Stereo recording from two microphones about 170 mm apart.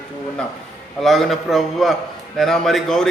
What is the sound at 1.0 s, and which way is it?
A man's voice, centre (ahead or behind).